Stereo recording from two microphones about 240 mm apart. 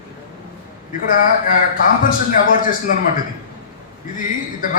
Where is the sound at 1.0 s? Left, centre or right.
Left.